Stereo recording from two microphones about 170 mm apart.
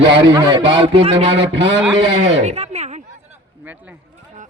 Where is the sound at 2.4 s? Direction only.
40° right (ahead or behind).